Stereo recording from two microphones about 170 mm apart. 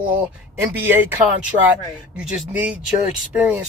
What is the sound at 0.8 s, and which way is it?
A man's voice, 10° right (ahead or behind).